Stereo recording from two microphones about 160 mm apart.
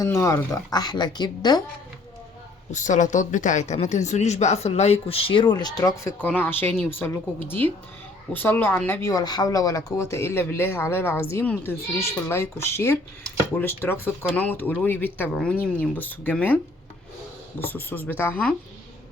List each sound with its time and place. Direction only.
0.0 s speech: 20° left (ahead or behind)
2.7 s a woman's voice: 50° left (ahead or behind); by 16.6 s 10° left (ahead or behind)
17.6 s speech: 15° left (ahead or behind)